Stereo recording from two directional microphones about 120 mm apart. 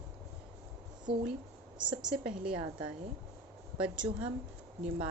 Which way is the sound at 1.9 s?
5° right (ahead or behind).